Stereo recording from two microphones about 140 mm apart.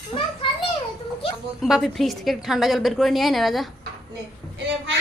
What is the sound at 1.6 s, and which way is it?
A woman's voice, centre (ahead or behind).